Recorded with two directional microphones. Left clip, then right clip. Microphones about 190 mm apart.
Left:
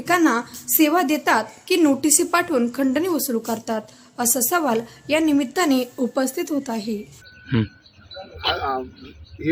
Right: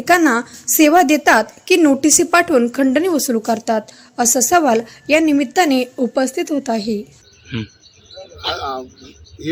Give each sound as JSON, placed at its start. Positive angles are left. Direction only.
{"t": 0.0, "sound": "a woman's voice", "side_deg": -20}
{"t": 7.4, "sound": "speech", "side_deg": 25}
{"t": 8.5, "sound": "speech", "side_deg": 5}